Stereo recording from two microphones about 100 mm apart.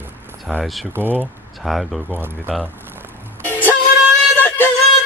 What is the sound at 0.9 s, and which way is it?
Speech, 20° right (ahead or behind).